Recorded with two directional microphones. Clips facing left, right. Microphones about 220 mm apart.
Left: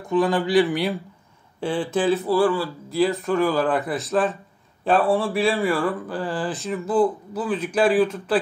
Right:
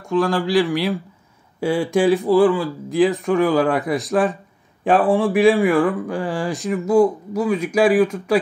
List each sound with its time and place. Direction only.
0.1 s speech: centre (ahead or behind)